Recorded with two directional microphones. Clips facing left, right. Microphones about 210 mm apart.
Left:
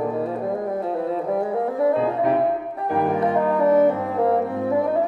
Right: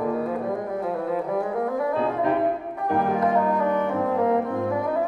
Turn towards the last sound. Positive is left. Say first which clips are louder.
# left 2 dB
turn(degrees=35)  # may be behind; listen again after turning